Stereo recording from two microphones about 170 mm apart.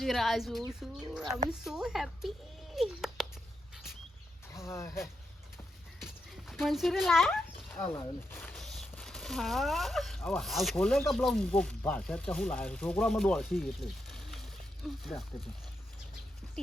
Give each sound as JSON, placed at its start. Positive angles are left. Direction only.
{"t": 0.0, "sound": "a child's voice", "side_deg": 0}
{"t": 4.5, "sound": "a sound", "side_deg": 15}
{"t": 6.0, "sound": "dog", "side_deg": 0}
{"t": 7.7, "sound": "speech", "side_deg": 10}